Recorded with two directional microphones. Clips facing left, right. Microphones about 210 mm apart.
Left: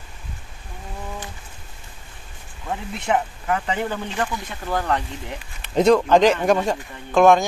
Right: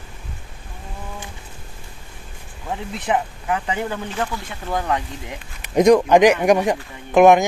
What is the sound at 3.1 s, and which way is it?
Speech, 10° right (ahead or behind).